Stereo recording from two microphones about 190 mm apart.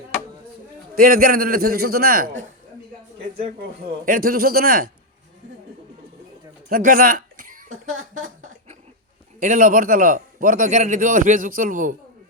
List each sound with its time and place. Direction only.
0.9 s a man's voice: 50° right (ahead or behind)
4.0 s a man's voice: 50° right (ahead or behind)
6.7 s a sound: 50° right (ahead or behind)
9.4 s a man's voice: 45° right (ahead or behind)